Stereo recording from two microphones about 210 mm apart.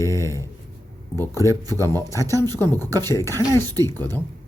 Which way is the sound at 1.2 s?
15° right (ahead or behind).